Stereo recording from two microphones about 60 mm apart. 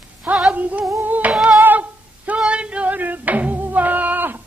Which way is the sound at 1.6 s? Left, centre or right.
Right.